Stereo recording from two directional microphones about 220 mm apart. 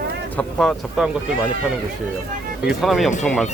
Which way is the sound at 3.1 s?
35° left (ahead or behind).